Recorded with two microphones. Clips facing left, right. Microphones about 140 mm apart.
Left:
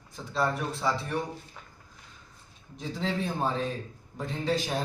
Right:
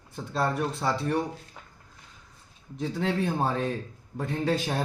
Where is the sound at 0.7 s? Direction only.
60° right (ahead or behind).